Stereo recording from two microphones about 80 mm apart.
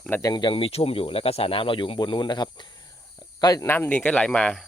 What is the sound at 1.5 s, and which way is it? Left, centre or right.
Speech, left.